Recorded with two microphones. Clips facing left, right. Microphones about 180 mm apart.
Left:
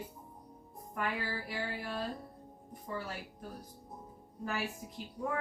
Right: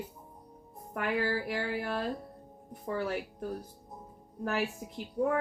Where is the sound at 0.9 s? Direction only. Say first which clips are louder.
Right 6 dB; 65° right (ahead or behind).